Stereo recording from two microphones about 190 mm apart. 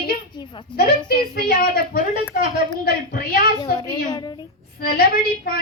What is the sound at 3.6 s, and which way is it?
Speech, 20° left (ahead or behind).